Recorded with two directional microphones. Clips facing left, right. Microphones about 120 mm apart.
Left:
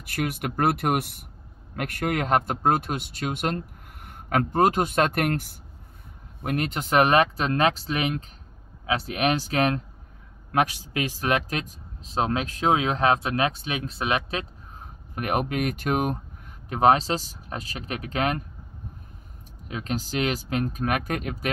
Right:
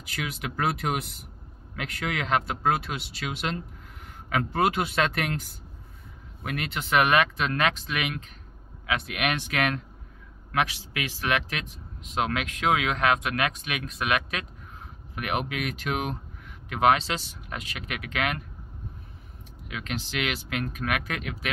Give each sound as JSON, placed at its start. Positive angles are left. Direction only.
{"t": 0.1, "sound": "speech", "side_deg": 55}
{"t": 6.4, "sound": "speech", "side_deg": 40}
{"t": 10.5, "sound": "speech", "side_deg": 45}
{"t": 15.1, "sound": "speech", "side_deg": 40}
{"t": 19.7, "sound": "speech", "side_deg": 40}